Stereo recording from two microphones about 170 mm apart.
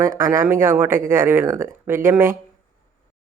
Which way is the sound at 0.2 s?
15° right (ahead or behind).